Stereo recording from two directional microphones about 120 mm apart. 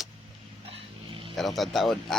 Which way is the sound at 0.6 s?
50° right (ahead or behind).